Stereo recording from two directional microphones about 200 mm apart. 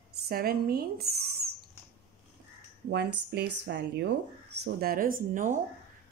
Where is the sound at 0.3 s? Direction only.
50° right (ahead or behind).